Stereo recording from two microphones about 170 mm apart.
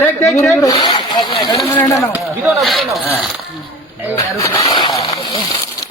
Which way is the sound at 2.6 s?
Centre (ahead or behind).